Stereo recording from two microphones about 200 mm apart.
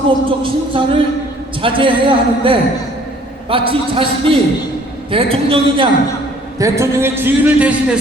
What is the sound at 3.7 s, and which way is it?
Speech, 25° right (ahead or behind).